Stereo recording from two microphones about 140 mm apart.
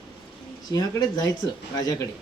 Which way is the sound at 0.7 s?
30° left (ahead or behind).